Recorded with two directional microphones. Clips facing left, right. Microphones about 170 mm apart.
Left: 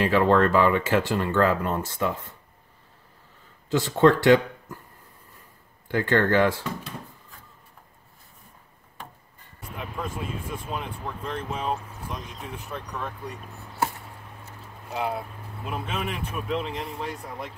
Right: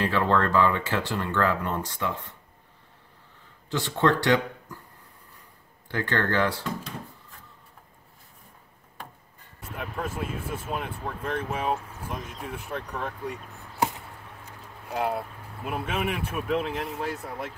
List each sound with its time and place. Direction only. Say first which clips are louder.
0.0 s speech: left 4 dB; 20° left (ahead or behind)
4.0 s speech: left 5 dB; 20° left (ahead or behind)
5.9 s speech: left 5 dB; 15° left (ahead or behind)
9.8 s speech: right 1 dB; 5° right (ahead or behind)
13.7 s chop: right 1 dB; 15° right (ahead or behind)
14.9 s speech: right 1 dB; centre (ahead or behind)